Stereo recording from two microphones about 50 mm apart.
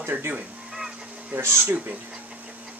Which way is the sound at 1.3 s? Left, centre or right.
Right.